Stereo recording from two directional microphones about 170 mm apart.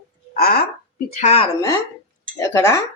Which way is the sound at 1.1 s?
40° left (ahead or behind).